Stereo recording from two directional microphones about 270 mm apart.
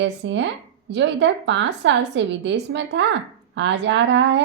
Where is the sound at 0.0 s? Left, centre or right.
Right.